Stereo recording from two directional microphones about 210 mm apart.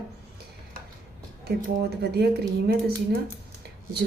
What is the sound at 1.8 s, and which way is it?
A woman's voice, 50° right (ahead or behind).